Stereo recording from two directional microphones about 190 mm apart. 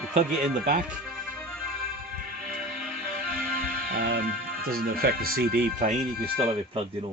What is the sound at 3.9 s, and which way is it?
Music, 60° right (ahead or behind).